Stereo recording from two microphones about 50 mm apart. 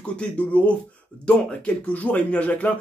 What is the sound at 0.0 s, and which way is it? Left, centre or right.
Speech, left.